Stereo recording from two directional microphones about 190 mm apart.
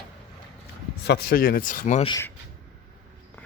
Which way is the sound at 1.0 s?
60° left (ahead or behind).